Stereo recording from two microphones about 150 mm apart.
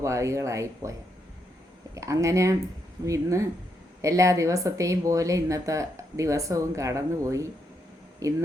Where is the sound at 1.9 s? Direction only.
20° right (ahead or behind).